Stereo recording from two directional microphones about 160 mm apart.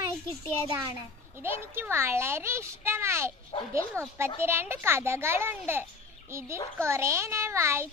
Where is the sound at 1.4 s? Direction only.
15° right (ahead or behind).